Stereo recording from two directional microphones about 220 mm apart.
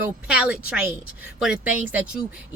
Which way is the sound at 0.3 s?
5° right (ahead or behind).